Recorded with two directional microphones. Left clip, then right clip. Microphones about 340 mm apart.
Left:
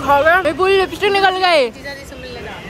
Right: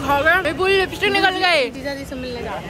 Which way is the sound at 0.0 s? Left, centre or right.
Centre.